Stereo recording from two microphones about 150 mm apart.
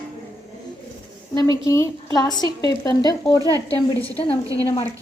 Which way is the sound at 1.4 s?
20° left (ahead or behind).